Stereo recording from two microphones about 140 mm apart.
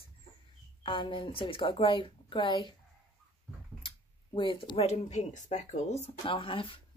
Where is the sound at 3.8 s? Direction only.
35° left (ahead or behind).